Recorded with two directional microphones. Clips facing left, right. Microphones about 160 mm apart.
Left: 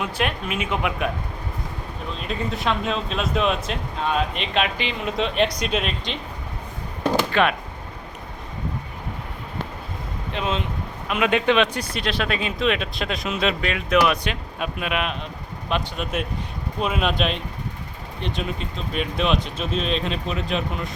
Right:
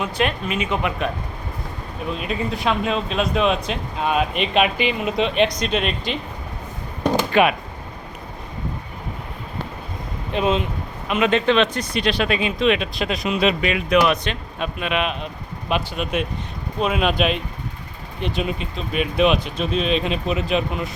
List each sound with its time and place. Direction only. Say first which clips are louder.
0.0 s speech: right 3 dB; 5° left (ahead or behind)
2.1 s speech: right 1 dB; 5° right (ahead or behind)
4.0 s speech: right 3 dB; 15° right (ahead or behind); by 6.1 s centre (ahead or behind)
7.0 s a sound: right 3 dB; 15° right (ahead or behind)
10.3 s speech: right 6 dB; 15° right (ahead or behind)
11.1 s speech: right 2 dB; 5° left (ahead or behind)
15.7 s speech: right 3 dB; 10° right (ahead or behind)